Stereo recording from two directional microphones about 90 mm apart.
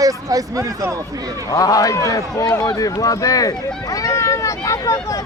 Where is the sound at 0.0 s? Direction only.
40° right (ahead or behind).